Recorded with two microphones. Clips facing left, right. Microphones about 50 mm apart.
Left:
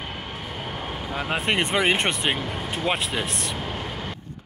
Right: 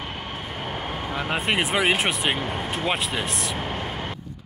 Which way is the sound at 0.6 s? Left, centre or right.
Right.